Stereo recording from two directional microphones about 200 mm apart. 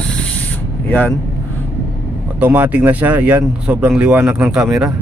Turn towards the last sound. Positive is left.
turn(degrees=-5)  # may be behind; listen again after turning